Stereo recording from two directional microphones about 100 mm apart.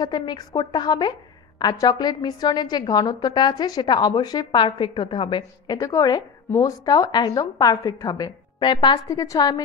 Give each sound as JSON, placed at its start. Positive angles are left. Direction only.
{"t": 0.0, "sound": "a woman's voice", "side_deg": 45}
{"t": 5.8, "sound": "a woman's voice", "side_deg": 35}
{"t": 9.0, "sound": "a woman's voice", "side_deg": 35}